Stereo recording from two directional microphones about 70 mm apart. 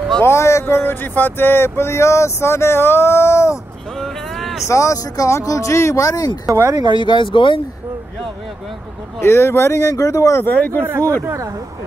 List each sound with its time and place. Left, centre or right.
0.2 s speech: left
4.0 s vehicle: centre
4.6 s speech: left
6.4 s speech: right
9.2 s speech: left
9.8 s speech: left
10.4 s speech: left
11.2 s speech: right